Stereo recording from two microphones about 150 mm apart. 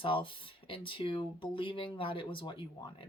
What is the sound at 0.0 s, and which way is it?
Speech, 35° left (ahead or behind).